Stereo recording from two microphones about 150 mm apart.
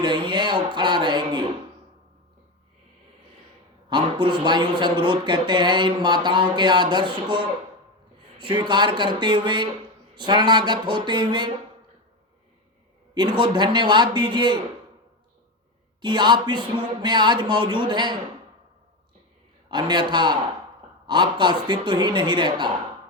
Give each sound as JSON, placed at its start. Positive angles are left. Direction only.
{"t": 0.0, "sound": "speech", "side_deg": -30}
{"t": 3.8, "sound": "speech", "side_deg": -30}
{"t": 13.1, "sound": "speech", "side_deg": -30}
{"t": 16.0, "sound": "speech", "side_deg": -30}
{"t": 19.6, "sound": "speech", "side_deg": -30}